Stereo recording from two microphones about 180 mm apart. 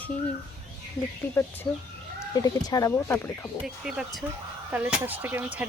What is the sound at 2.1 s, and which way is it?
Speech, 20° left (ahead or behind).